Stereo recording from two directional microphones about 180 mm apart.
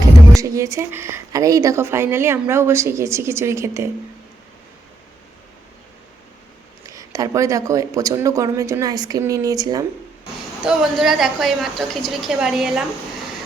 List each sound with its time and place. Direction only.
0.4 s a woman's voice: 15° right (ahead or behind)
6.8 s speech: 20° right (ahead or behind)
10.6 s a woman's voice: 5° right (ahead or behind)